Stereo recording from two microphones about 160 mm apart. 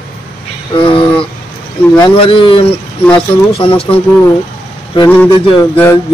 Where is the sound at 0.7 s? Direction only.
35° left (ahead or behind).